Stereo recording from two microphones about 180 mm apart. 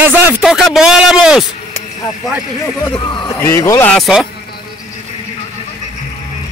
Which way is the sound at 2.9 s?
25° left (ahead or behind).